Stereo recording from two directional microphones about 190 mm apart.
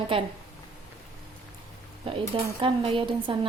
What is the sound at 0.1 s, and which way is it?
Speech, 25° right (ahead or behind).